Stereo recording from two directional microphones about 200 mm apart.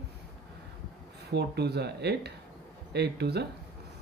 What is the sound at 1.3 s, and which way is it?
Speech, 55° right (ahead or behind).